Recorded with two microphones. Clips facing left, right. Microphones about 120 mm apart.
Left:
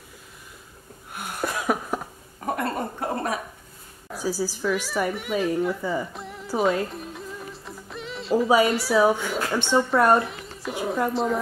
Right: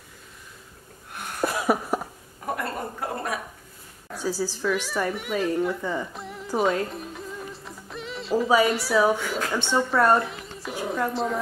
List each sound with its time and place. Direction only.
1.1 s cough: centre (ahead or behind)
2.5 s a sound: 25° left (ahead or behind)
4.1 s speech: 10° left (ahead or behind)
5.6 s music: 5° left (ahead or behind)
8.6 s speech: centre (ahead or behind)
10.1 s a sound: centre (ahead or behind)